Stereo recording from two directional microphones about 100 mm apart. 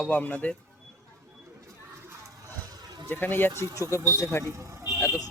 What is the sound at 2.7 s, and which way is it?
Vehicle, 40° right (ahead or behind).